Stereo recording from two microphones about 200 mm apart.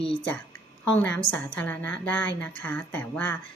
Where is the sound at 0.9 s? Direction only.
5° left (ahead or behind).